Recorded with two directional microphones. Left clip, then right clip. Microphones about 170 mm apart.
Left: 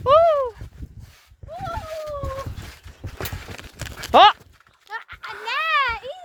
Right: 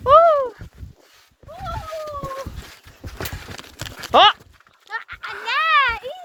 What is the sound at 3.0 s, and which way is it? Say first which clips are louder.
Horse: right 1 dB; 90° right.